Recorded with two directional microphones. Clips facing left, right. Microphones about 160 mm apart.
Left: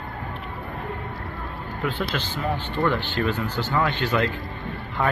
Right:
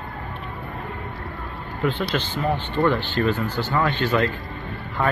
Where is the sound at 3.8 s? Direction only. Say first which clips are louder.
Right 2 dB; 15° left (ahead or behind).